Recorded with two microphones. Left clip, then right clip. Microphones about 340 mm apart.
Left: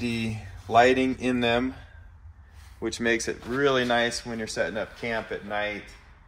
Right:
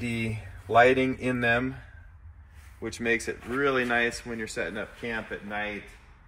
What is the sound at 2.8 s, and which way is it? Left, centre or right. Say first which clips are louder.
Speech: left 2 dB; left.